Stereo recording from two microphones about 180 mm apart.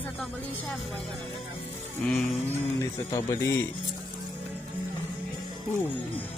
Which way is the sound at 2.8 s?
15° left (ahead or behind).